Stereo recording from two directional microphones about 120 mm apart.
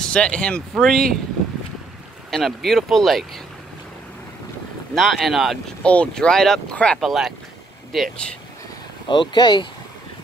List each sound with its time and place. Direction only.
0.0 s speech: 10° left (ahead or behind)
2.3 s speech: centre (ahead or behind)
4.9 s speech: centre (ahead or behind)
5.8 s speech: 10° left (ahead or behind)
9.0 s speech: 40° left (ahead or behind)